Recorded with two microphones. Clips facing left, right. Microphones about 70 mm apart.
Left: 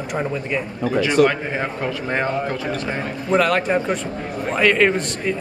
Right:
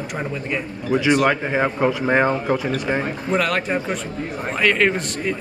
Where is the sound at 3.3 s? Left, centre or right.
Centre.